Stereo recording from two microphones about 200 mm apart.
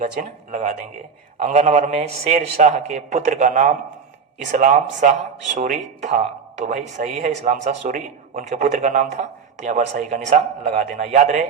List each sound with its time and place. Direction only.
0.0 s a man's voice: 40° right (ahead or behind)